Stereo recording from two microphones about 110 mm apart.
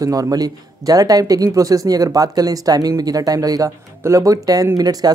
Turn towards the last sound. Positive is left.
turn(degrees=-35)  # may be behind; listen again after turning